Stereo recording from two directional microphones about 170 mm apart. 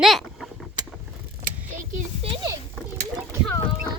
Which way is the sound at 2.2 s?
35° right (ahead or behind).